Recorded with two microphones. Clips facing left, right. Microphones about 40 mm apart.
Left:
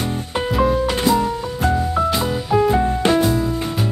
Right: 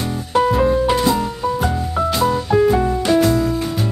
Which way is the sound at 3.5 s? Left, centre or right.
Centre.